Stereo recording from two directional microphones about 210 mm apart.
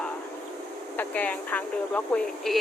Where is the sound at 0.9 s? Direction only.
10° left (ahead or behind).